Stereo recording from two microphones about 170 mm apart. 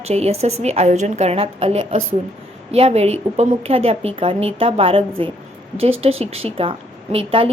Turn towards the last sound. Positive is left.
turn(degrees=-35)  # may be behind; listen again after turning